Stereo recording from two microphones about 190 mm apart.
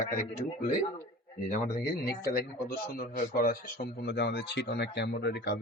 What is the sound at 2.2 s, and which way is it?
Speech, 55° left (ahead or behind).